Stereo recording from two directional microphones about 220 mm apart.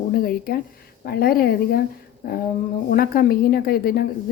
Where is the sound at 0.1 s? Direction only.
40° left (ahead or behind).